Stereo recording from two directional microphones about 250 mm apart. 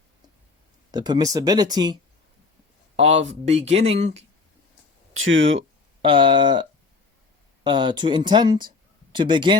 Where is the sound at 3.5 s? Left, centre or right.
Right.